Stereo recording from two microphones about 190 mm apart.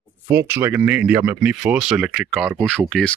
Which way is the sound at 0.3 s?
10° right (ahead or behind).